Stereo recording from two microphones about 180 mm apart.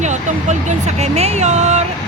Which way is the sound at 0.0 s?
40° right (ahead or behind).